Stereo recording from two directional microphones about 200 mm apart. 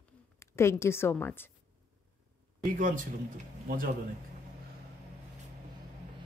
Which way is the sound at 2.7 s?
45° right (ahead or behind).